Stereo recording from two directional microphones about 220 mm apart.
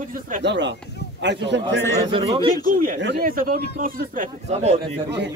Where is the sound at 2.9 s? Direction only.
45° right (ahead or behind).